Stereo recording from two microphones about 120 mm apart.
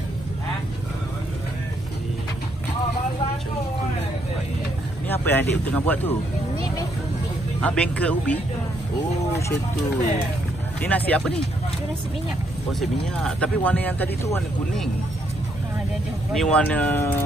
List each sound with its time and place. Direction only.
5.0 s speech: 15° left (ahead or behind)
7.6 s speech: 10° left (ahead or behind)
10.8 s speech: 15° left (ahead or behind)
13.2 s speech: 10° left (ahead or behind)
16.3 s speech: 10° left (ahead or behind)